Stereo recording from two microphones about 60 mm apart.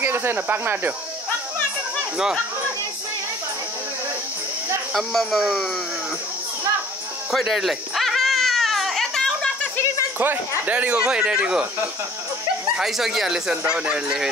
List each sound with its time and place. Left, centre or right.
0.0 s speech: right
4.9 s speech: centre
7.3 s baby cry: centre
10.1 s speech: right; by 11.6 s centre
12.7 s speech: centre
13.5 s speech: centre